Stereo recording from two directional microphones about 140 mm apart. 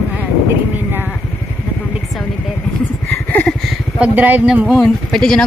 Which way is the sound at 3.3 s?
10° left (ahead or behind).